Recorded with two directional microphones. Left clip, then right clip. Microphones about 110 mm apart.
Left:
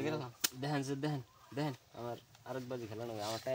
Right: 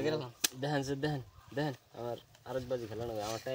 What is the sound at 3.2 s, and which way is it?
Speech, 35° left (ahead or behind).